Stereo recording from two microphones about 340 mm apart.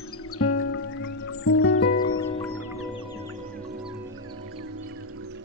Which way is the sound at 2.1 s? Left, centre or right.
Centre.